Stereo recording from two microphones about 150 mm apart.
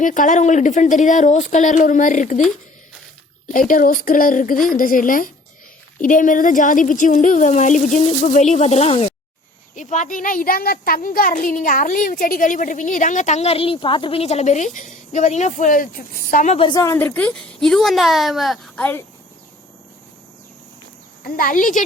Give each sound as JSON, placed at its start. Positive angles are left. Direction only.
{"t": 0.0, "sound": "a child's voice", "side_deg": 60}
{"t": 3.5, "sound": "a child's voice", "side_deg": 65}
{"t": 9.7, "sound": "a child's voice", "side_deg": 55}
{"t": 16.6, "sound": "a woman's voice", "side_deg": 30}
{"t": 21.3, "sound": "a child's voice", "side_deg": 65}